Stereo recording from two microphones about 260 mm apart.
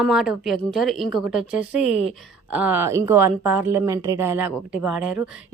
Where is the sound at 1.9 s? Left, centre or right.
Left.